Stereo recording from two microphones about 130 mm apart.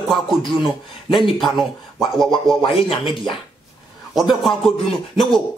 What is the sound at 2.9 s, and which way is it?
Music, 45° left (ahead or behind).